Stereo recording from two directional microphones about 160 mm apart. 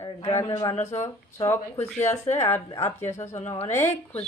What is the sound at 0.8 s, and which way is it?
Speech, 45° left (ahead or behind).